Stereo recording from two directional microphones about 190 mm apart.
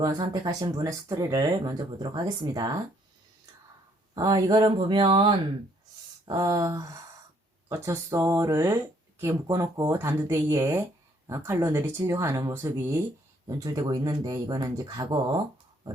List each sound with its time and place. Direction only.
0.0 s speech: 20° right (ahead or behind)
4.1 s speech: 20° right (ahead or behind)